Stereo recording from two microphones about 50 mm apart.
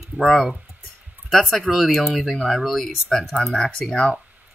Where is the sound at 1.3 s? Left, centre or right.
Centre.